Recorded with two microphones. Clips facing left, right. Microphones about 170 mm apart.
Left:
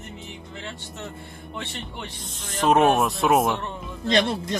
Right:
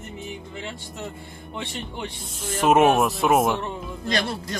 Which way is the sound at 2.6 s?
5° right (ahead or behind).